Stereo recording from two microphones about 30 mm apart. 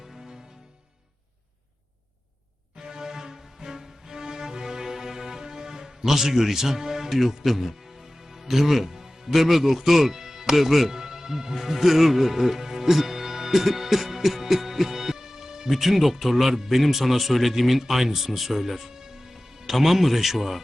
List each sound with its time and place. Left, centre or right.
2.8 s music: right
7.2 s speech: centre
15.7 s speech: centre
18.9 s music: centre
19.8 s speech: centre